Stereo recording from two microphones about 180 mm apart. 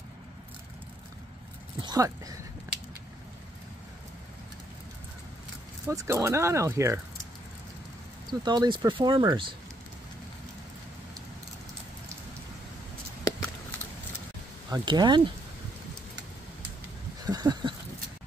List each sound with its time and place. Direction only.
1.8 s speech: 20° right (ahead or behind)
5.9 s speech: 15° right (ahead or behind)
8.3 s speech: 25° right (ahead or behind)
14.7 s speech: 25° right (ahead or behind)
17.2 s a sound: 20° right (ahead or behind)